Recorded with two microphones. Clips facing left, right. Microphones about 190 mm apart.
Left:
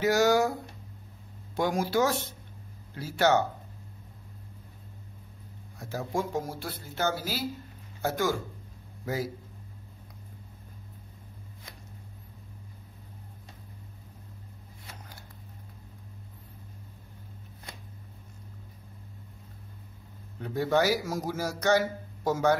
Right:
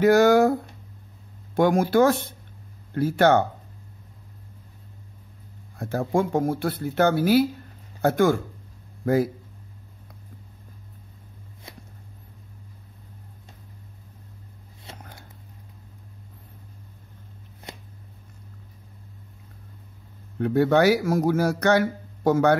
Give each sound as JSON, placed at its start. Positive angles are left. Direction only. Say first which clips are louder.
{"t": 0.0, "sound": "speech", "louder": "right 7 dB", "side_deg": -55}
{"t": 5.8, "sound": "speech", "louder": "right 8 dB", "side_deg": -55}
{"t": 20.3, "sound": "speech", "louder": "right 7 dB", "side_deg": -65}